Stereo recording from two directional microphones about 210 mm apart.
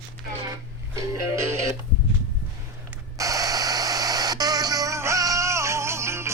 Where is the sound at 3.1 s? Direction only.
15° right (ahead or behind).